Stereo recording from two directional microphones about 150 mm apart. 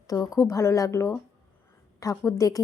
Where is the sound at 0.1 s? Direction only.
25° left (ahead or behind).